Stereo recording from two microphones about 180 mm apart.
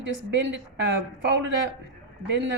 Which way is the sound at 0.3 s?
75° right (ahead or behind).